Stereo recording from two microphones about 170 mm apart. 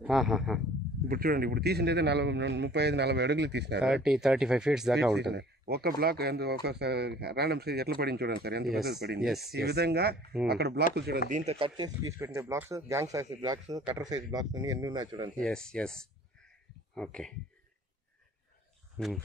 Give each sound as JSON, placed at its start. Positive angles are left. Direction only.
{"t": 0.0, "sound": "speech", "side_deg": -5}
{"t": 1.0, "sound": "speech", "side_deg": -60}
{"t": 3.8, "sound": "speech", "side_deg": -5}
{"t": 5.1, "sound": "speech", "side_deg": -80}
{"t": 9.2, "sound": "speech", "side_deg": 0}
{"t": 9.5, "sound": "speech", "side_deg": -70}
{"t": 11.2, "sound": "speech", "side_deg": -45}
{"t": 11.5, "sound": "speech", "side_deg": -30}
{"t": 15.4, "sound": "speech", "side_deg": 5}
{"t": 19.0, "sound": "speech", "side_deg": 0}